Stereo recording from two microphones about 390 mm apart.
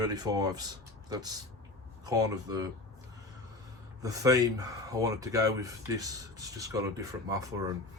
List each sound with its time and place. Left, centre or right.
0.0 s speech: centre
4.0 s speech: centre